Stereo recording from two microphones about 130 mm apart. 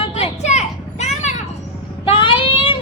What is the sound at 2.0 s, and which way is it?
Child singing, 40° left (ahead or behind).